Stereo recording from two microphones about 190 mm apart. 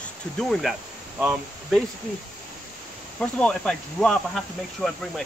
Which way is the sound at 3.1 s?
5° left (ahead or behind).